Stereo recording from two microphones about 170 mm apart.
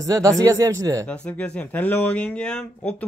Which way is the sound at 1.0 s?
5° left (ahead or behind).